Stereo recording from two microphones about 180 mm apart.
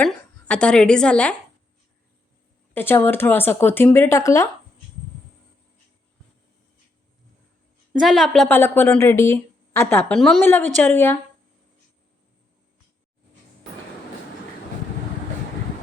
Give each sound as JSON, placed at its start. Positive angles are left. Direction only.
{"t": 0.0, "sound": "speech", "side_deg": 5}
{"t": 2.7, "sound": "a woman's voice", "side_deg": 10}
{"t": 7.9, "sound": "a woman's voice", "side_deg": 0}
{"t": 8.4, "sound": "a woman's voice", "side_deg": 10}